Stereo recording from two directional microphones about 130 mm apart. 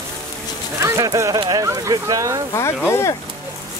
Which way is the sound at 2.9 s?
20° left (ahead or behind).